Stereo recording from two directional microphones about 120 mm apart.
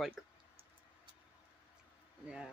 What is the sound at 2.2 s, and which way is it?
Speech, 5° right (ahead or behind).